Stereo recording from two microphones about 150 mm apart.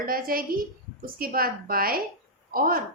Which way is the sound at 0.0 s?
75° right (ahead or behind).